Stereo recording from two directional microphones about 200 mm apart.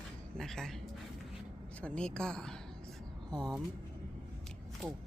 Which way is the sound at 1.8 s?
5° left (ahead or behind).